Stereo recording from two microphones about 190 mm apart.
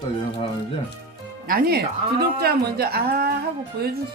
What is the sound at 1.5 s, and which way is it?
A woman's voice, 50° right (ahead or behind).